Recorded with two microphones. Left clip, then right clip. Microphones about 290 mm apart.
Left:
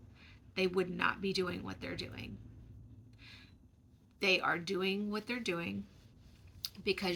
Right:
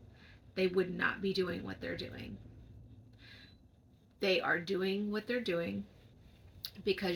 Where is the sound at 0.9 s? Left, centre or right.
Left.